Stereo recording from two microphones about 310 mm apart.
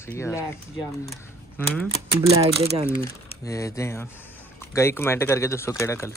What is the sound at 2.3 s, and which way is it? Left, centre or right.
Speech, centre.